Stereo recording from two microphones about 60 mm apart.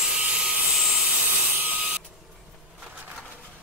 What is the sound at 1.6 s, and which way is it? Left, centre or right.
Printer, right.